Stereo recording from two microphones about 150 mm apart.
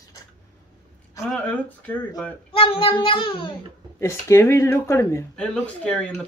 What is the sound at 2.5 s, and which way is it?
A child's voice, 35° left (ahead or behind).